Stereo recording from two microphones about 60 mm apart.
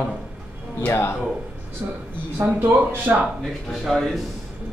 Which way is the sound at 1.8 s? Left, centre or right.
Right.